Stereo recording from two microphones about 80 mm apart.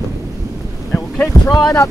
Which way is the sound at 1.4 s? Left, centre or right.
Left.